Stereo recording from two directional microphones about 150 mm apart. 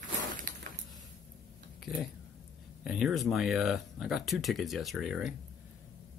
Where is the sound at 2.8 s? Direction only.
5° right (ahead or behind).